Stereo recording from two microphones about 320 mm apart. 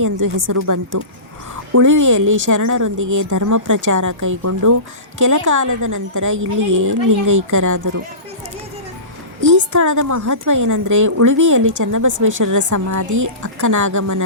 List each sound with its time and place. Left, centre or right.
0.0 s speech: right
9.4 s speech: right